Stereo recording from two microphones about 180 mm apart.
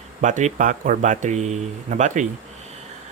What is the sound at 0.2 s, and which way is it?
Speech, 40° right (ahead or behind).